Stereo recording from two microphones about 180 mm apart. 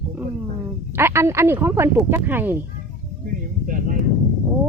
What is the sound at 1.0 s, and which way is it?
Speech, 15° right (ahead or behind).